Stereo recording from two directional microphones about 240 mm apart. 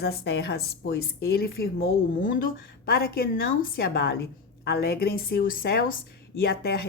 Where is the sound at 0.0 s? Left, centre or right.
Left.